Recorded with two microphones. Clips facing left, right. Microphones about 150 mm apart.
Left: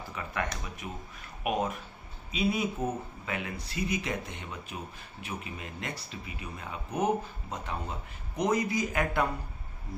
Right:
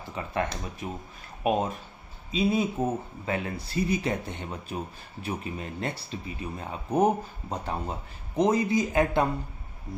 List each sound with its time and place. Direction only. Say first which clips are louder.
0.2 s a man's voice: right 5 dB; 30° right (ahead or behind)